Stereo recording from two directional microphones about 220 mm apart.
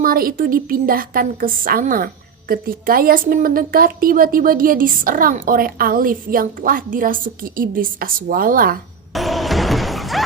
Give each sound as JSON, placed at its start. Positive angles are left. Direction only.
{"t": 0.0, "sound": "a woman's voice", "side_deg": -40}
{"t": 9.1, "sound": "music", "side_deg": 0}